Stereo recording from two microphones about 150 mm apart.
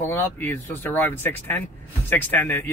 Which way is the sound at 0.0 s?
15° left (ahead or behind).